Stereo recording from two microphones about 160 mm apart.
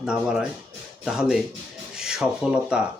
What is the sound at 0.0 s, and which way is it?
Speech, 5° right (ahead or behind).